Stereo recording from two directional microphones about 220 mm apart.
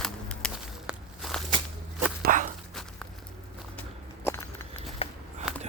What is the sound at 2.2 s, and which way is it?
Walk, 35° right (ahead or behind).